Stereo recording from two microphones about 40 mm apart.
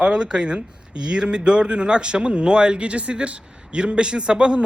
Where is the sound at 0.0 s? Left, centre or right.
Centre.